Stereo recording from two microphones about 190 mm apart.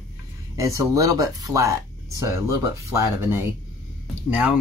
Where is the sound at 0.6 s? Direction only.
15° right (ahead or behind).